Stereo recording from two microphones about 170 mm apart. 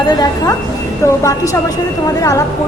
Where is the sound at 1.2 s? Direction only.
20° left (ahead or behind).